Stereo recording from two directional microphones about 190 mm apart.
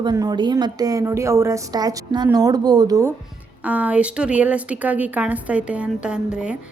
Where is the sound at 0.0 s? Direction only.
20° right (ahead or behind).